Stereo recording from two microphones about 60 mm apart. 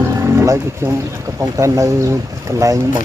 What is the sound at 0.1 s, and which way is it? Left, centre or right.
Music, right.